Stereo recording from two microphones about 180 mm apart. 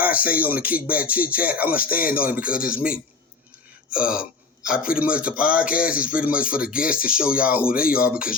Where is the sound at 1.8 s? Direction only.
55° left (ahead or behind).